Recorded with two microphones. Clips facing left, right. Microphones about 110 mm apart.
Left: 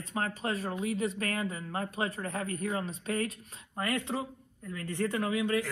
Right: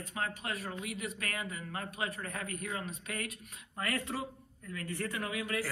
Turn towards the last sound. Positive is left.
turn(degrees=30)  # may be behind; listen again after turning